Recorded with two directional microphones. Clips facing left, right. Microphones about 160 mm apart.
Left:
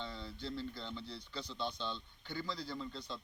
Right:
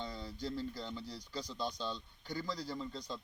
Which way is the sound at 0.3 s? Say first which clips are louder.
Right 3 dB; 45° right (ahead or behind).